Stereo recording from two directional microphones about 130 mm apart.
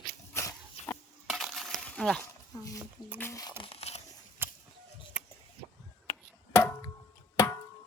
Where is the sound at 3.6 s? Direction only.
50° left (ahead or behind).